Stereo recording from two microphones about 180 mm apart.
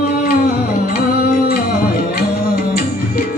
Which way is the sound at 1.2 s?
60° left (ahead or behind).